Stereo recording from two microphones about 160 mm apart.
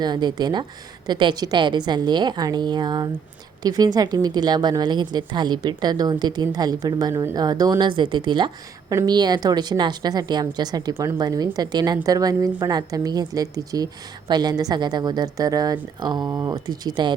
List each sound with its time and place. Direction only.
0.0 s a woman's voice: 25° right (ahead or behind)